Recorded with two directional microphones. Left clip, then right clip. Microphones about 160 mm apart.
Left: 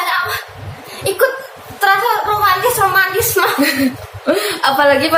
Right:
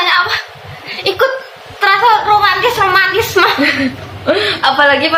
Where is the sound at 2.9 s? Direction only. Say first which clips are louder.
Right 3 dB; 20° right (ahead or behind).